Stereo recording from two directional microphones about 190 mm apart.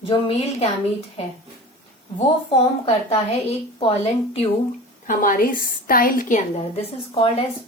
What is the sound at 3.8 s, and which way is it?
Speech, 30° left (ahead or behind).